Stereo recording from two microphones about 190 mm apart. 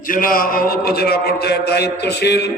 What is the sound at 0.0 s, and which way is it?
A man's voice, 45° left (ahead or behind).